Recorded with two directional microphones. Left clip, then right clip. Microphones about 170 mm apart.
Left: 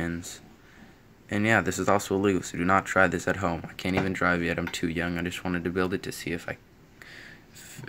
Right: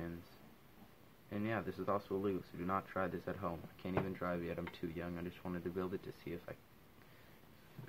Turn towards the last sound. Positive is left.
turn(degrees=10)  # may be behind; listen again after turning